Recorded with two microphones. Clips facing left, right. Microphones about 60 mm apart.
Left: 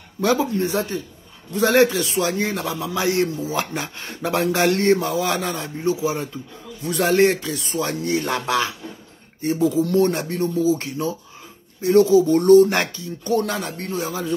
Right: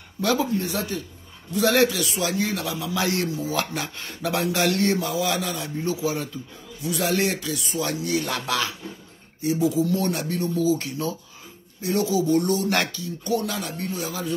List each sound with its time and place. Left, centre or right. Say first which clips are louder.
0.2 s speech: left 3 dB; left
5.8 s speech: left 4 dB; left
6.8 s speech: left 7 dB; left
9.4 s speech: left 2 dB; left
13.4 s speech: left 4 dB; left